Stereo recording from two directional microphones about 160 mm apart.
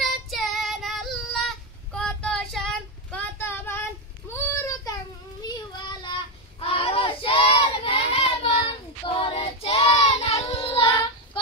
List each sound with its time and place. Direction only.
0.0 s child singing: centre (ahead or behind); by 11.0 s 35° left (ahead or behind)